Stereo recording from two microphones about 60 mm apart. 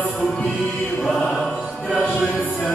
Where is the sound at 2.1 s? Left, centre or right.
Left.